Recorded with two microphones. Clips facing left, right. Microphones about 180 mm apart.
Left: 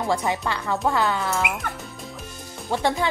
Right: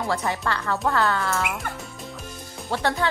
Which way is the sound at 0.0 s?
15° left (ahead or behind).